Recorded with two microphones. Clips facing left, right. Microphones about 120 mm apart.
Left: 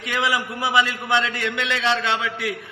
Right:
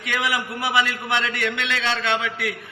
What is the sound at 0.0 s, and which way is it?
A man's voice, 20° left (ahead or behind).